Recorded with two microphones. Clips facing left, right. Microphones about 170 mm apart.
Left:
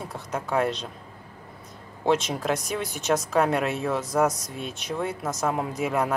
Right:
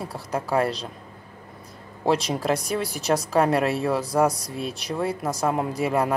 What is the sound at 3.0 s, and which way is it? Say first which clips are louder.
Speech: even; 35° right (ahead or behind).